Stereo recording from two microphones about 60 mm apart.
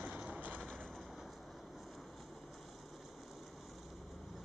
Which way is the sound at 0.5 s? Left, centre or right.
Centre.